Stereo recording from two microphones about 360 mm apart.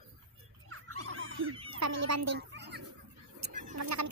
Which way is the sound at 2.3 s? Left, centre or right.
Right.